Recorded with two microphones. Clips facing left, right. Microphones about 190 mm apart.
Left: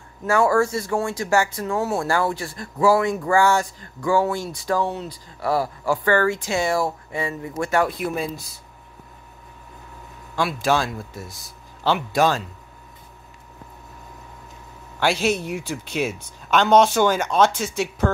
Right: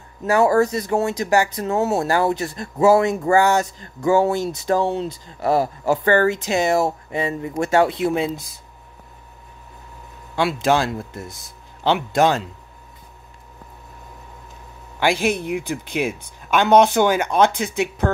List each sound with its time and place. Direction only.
0.2 s speech: 20° right (ahead or behind)
10.3 s speech: 20° right (ahead or behind)
15.0 s speech: 15° right (ahead or behind)